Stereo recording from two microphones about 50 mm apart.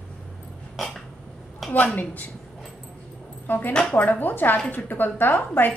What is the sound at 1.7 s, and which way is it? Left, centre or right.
Speech, left.